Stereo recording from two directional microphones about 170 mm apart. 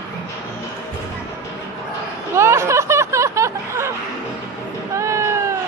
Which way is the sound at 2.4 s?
15° right (ahead or behind).